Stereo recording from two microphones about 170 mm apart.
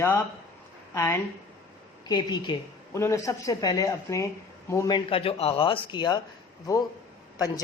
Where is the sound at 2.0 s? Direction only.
25° left (ahead or behind).